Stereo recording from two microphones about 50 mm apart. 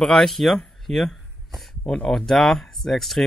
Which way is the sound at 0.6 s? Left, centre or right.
Centre.